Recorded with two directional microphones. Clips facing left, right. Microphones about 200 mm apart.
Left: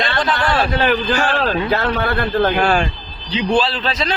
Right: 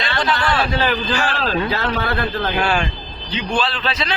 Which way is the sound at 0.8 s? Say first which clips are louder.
Left 3 dB; 55° left (ahead or behind).